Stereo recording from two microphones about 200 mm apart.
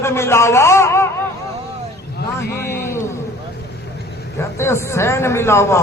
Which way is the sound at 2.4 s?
50° left (ahead or behind).